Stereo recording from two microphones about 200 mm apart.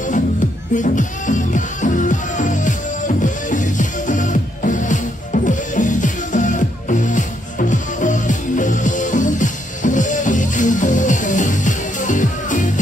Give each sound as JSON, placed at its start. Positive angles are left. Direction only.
{"t": 0.7, "sound": "music", "side_deg": 40}